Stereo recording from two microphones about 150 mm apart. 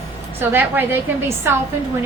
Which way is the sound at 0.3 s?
15° right (ahead or behind).